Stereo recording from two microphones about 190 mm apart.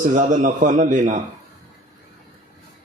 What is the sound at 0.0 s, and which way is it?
A man's voice, 40° right (ahead or behind).